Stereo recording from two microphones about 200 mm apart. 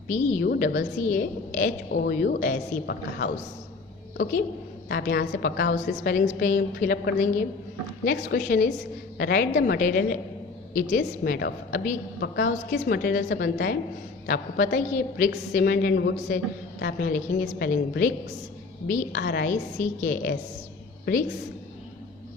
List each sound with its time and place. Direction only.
0.1 s a woman's voice: 35° left (ahead or behind)
0.4 s a woman's voice: 50° left (ahead or behind)
1.1 s a woman's voice: 40° left (ahead or behind)
4.2 s a woman's voice: 45° left (ahead or behind)
6.1 s a woman's voice: 40° left (ahead or behind)
18.9 s a woman's voice: 40° left (ahead or behind)
19.2 s a woman's voice: 55° left (ahead or behind)